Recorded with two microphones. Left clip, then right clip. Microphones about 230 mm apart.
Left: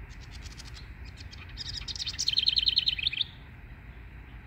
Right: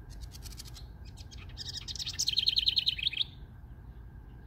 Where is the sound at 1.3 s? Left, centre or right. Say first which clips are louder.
Left 3 dB; centre.